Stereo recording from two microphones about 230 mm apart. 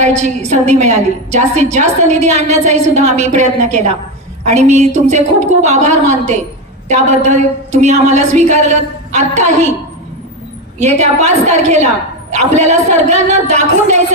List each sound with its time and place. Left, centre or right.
0.0 s a woman's voice: right
10.8 s a woman's voice: right